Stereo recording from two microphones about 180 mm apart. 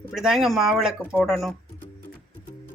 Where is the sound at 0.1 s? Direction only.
Centre (ahead or behind).